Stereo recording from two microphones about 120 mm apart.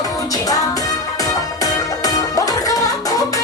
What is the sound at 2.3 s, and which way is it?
Music, 30° left (ahead or behind).